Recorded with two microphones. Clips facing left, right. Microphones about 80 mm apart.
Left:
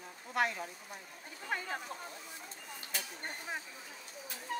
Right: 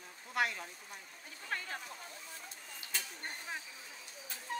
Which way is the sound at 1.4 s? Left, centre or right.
Centre.